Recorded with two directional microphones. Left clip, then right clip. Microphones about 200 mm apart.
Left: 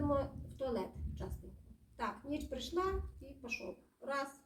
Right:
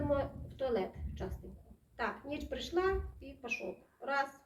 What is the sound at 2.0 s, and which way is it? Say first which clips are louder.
Speech: right 2 dB; 15° left (ahead or behind).